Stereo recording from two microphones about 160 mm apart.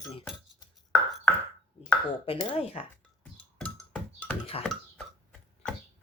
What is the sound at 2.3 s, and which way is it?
Speech, 35° left (ahead or behind).